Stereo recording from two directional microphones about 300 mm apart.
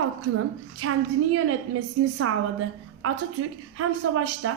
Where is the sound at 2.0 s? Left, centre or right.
Right.